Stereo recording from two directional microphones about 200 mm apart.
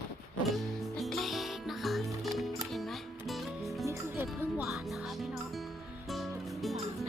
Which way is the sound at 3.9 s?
10° right (ahead or behind).